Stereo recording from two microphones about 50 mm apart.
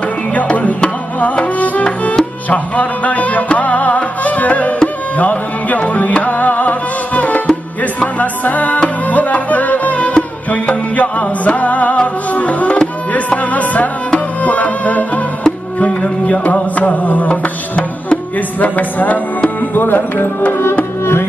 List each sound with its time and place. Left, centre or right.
0.3 s music: left
21.0 s music: left